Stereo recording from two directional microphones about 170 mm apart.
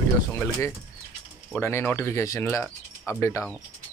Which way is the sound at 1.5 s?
15° left (ahead or behind).